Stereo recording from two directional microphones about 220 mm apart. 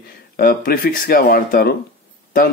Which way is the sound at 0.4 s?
40° left (ahead or behind).